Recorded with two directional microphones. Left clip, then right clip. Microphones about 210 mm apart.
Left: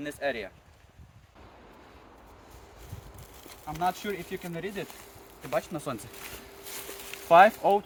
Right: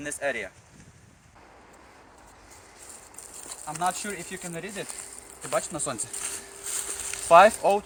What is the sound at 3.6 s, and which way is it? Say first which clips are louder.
Speech: right 1 dB; centre (ahead or behind).